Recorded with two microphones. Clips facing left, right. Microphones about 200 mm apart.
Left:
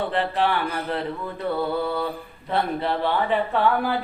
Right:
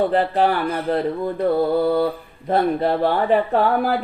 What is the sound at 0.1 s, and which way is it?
Speech, 40° right (ahead or behind).